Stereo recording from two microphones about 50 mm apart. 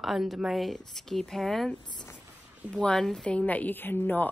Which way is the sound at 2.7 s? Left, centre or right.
Centre.